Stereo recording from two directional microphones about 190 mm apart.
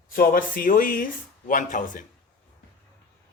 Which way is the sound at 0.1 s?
50° left (ahead or behind).